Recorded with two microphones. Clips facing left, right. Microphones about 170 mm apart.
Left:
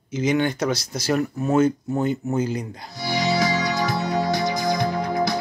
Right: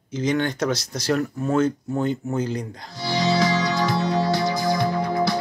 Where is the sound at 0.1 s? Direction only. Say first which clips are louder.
Left 2 dB; 10° left (ahead or behind).